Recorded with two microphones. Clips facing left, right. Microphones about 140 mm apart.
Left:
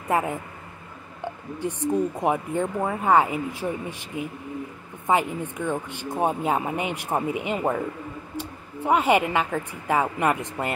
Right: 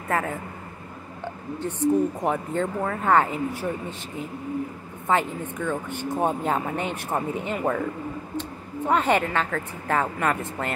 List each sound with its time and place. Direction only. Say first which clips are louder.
0.1 s speech: left 2 dB; 15° left (ahead or behind)
1.6 s speech: right 2 dB; 10° left (ahead or behind)
5.0 s speech: left 1 dB; 10° left (ahead or behind)